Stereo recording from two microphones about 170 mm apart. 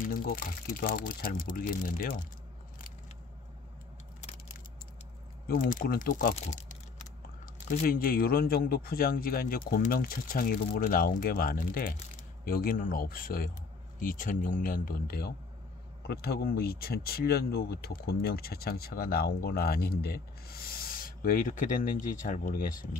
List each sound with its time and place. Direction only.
0.0 s speech: 55° left (ahead or behind)
5.5 s speech: 55° left (ahead or behind)
6.3 s crumpling: 40° left (ahead or behind)
7.8 s speech: 60° left (ahead or behind)